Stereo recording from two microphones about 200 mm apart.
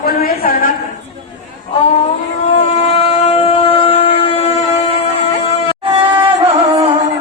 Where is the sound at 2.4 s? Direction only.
30° left (ahead or behind).